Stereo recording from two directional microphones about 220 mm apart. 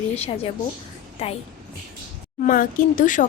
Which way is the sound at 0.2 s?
25° left (ahead or behind).